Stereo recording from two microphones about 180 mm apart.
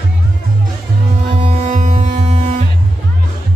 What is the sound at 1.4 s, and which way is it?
Music, 35° right (ahead or behind).